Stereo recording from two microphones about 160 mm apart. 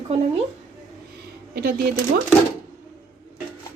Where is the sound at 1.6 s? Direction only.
70° right (ahead or behind).